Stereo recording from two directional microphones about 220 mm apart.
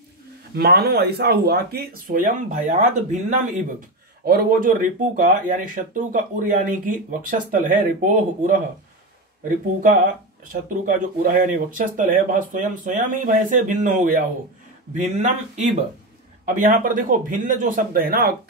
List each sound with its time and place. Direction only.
0.6 s speech: 45° right (ahead or behind)
10.5 s speech: 35° right (ahead or behind)